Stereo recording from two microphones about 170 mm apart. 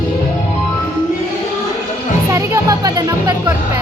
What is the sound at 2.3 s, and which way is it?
Music, 20° right (ahead or behind).